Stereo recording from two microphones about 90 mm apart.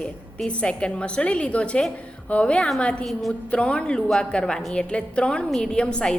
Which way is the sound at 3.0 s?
Centre (ahead or behind).